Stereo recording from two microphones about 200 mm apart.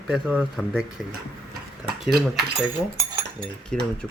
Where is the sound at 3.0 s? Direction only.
15° right (ahead or behind).